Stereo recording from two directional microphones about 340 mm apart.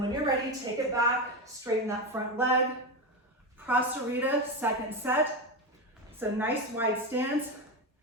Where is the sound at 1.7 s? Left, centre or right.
Centre.